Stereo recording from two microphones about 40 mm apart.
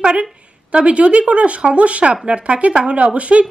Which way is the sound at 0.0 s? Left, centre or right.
Right.